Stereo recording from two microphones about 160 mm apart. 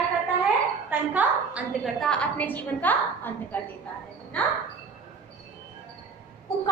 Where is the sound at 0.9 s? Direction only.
10° right (ahead or behind).